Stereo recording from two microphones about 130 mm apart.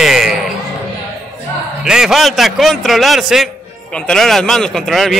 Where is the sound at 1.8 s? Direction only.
5° right (ahead or behind).